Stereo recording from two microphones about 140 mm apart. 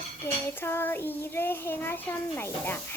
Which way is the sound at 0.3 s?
15° left (ahead or behind).